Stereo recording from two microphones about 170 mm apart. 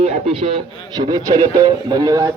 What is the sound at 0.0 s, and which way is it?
Speech, 35° right (ahead or behind).